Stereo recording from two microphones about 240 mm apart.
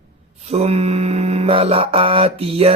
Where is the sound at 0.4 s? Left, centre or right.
Right.